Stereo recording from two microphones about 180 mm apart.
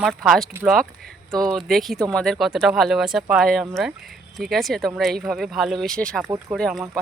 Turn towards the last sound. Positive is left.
turn(degrees=5)  # may be behind; listen again after turning